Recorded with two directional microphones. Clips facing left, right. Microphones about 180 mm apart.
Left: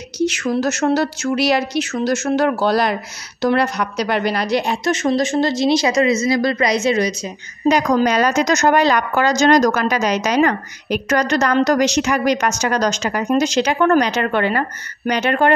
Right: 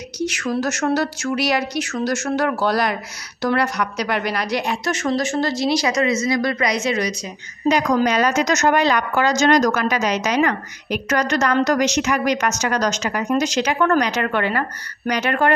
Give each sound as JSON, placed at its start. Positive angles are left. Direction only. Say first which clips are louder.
{"t": 0.2, "sound": "a woman's voice", "louder": "left 4 dB", "side_deg": 25}
{"t": 7.6, "sound": "a woman's voice", "louder": "left 2 dB", "side_deg": 40}